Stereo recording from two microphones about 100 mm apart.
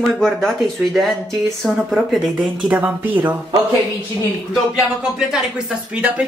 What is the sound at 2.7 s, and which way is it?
Speech, 15° right (ahead or behind).